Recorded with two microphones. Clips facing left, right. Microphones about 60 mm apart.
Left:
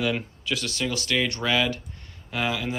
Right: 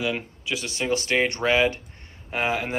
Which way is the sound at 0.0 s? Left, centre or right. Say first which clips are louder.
Left 1 dB; centre.